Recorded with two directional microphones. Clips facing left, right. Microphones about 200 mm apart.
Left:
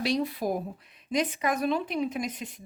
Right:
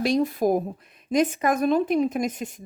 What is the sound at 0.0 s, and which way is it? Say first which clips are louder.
Speech: right 6 dB; 45° right (ahead or behind).